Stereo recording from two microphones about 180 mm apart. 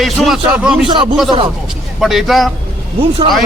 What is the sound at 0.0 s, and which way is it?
Speech, centre (ahead or behind).